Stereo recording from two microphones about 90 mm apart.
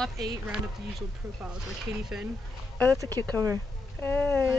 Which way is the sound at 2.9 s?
40° right (ahead or behind).